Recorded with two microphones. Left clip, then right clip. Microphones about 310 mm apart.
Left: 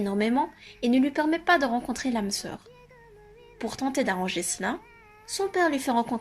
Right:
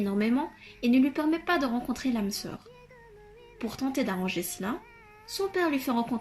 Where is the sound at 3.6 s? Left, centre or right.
Left.